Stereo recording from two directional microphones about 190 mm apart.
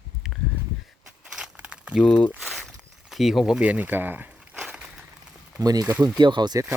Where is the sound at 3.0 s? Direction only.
Centre (ahead or behind).